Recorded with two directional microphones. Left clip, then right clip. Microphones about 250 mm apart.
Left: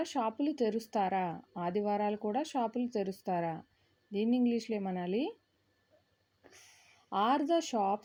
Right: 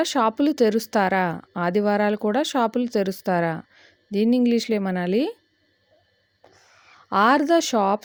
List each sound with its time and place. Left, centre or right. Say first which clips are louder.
0.0 s speech: right 13 dB; right
7.1 s speech: right 12 dB; right